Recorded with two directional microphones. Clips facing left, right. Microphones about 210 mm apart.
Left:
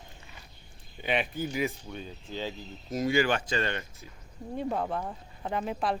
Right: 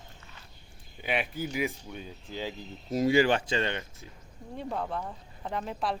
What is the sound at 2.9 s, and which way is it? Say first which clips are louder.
Speech: right 3 dB; 30° right (ahead or behind).